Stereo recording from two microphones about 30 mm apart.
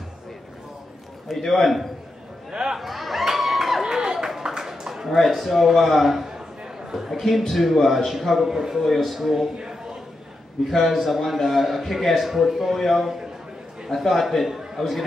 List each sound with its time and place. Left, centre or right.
1.3 s a man's voice: centre
2.5 s speech: right
2.8 s a sound: centre
3.8 s a sound: centre
5.1 s a man's voice: centre
8.8 s a man's voice: centre
10.9 s a man's voice: centre